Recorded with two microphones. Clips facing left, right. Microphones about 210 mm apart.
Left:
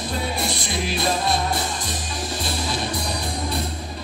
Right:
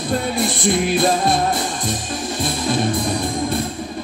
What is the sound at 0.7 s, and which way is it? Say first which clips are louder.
Music: right 9 dB; 50° right (ahead or behind).